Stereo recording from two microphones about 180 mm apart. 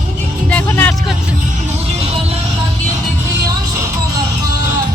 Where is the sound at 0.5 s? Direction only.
10° left (ahead or behind).